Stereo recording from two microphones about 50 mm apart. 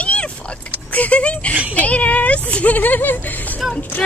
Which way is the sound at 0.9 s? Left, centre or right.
Left.